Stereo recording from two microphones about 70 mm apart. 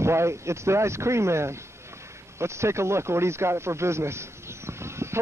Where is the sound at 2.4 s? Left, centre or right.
Right.